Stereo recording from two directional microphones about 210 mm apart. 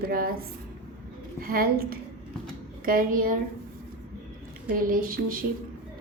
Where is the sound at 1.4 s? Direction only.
45° right (ahead or behind).